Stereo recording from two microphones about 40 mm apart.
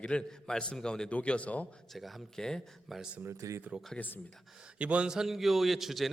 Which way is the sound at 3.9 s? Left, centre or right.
Left.